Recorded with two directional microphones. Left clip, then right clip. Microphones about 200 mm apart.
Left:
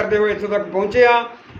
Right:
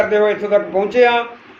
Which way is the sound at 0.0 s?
5° left (ahead or behind).